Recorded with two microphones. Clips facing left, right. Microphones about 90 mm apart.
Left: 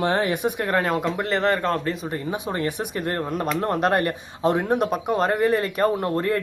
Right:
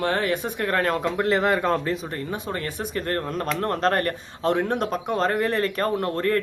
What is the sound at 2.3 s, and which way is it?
Speech, 15° left (ahead or behind).